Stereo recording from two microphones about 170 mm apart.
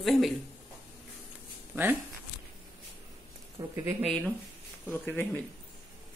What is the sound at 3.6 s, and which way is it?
Speech, 30° right (ahead or behind).